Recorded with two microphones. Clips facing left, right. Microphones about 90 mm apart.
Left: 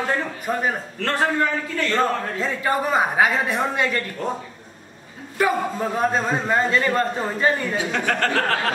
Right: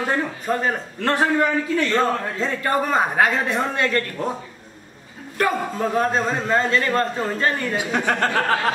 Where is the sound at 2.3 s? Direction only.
5° left (ahead or behind).